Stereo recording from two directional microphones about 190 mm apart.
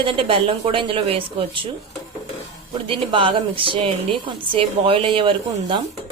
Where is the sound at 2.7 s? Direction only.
25° right (ahead or behind).